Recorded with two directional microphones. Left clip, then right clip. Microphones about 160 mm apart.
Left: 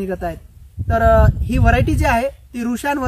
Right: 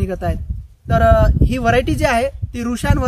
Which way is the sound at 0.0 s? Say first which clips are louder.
Even; 35° right (ahead or behind).